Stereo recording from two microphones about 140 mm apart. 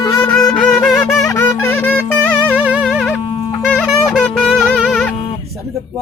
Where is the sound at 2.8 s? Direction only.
Centre (ahead or behind).